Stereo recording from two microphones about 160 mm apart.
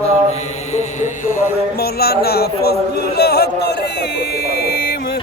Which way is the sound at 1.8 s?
75° left (ahead or behind).